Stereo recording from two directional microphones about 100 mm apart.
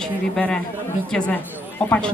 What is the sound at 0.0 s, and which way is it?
A man's voice, 10° left (ahead or behind).